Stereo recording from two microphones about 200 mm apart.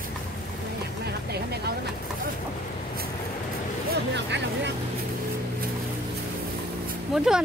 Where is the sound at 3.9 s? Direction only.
60° right (ahead or behind).